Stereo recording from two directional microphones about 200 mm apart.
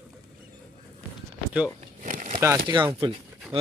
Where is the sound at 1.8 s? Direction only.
40° right (ahead or behind).